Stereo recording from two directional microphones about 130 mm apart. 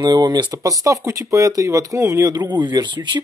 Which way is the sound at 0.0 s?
35° right (ahead or behind).